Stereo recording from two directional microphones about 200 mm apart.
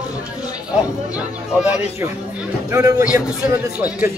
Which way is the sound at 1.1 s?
5° right (ahead or behind).